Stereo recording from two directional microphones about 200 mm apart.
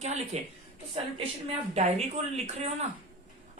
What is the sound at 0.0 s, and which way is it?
Speech, 35° right (ahead or behind).